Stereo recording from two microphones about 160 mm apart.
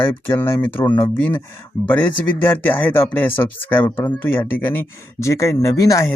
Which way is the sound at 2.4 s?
10° left (ahead or behind).